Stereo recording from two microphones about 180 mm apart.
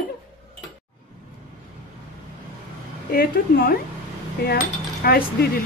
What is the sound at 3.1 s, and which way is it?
Speech, 55° left (ahead or behind).